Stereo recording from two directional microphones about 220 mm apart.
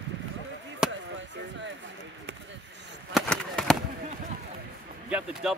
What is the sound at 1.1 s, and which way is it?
Chop, 55° right (ahead or behind).